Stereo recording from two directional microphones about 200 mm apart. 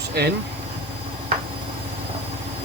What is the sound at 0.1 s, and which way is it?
Speech, 55° right (ahead or behind).